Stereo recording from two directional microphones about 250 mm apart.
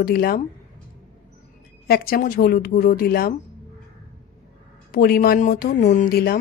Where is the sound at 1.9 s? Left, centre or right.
Left.